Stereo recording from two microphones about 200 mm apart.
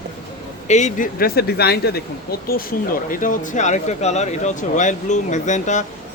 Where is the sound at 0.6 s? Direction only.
35° left (ahead or behind).